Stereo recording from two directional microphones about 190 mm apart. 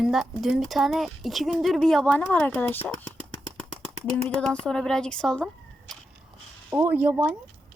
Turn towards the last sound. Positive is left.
turn(degrees=-10)  # may be behind; listen again after turning